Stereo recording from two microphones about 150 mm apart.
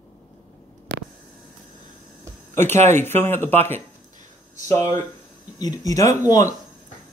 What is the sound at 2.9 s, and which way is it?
Speech, 15° left (ahead or behind).